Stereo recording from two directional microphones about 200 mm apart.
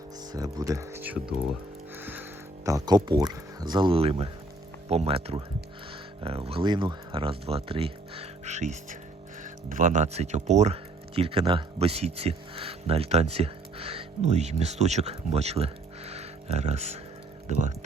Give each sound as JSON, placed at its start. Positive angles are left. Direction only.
{"t": 0.3, "sound": "speech", "side_deg": -15}
{"t": 2.0, "sound": "music", "side_deg": -10}
{"t": 2.6, "sound": "speech", "side_deg": -20}